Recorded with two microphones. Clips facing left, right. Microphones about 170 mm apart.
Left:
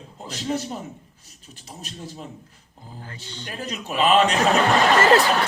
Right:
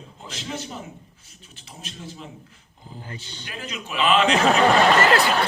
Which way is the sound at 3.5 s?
40° left (ahead or behind).